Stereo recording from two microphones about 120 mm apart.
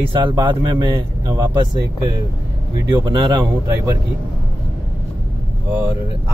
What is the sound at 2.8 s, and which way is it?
Speech, 40° right (ahead or behind).